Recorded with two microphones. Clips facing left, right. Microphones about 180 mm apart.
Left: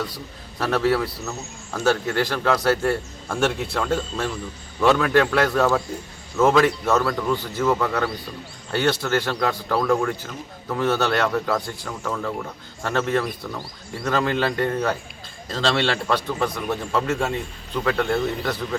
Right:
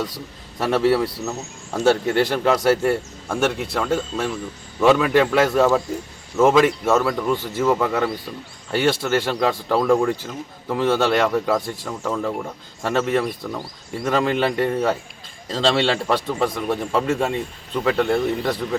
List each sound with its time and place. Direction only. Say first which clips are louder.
0.6 s speech: right 3 dB; 25° right (ahead or behind)
3.2 s speech: right 1 dB; 5° right (ahead or behind)
6.5 s speech: right 1 dB; 10° right (ahead or behind)